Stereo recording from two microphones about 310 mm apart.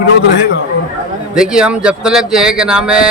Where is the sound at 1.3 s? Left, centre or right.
Centre.